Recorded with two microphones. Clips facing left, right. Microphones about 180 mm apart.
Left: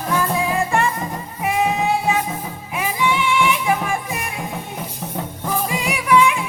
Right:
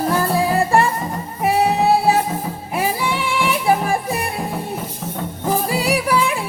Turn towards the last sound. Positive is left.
turn(degrees=-35)  # may be behind; listen again after turning